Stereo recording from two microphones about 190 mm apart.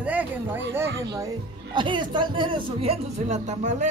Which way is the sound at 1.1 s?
20° right (ahead or behind).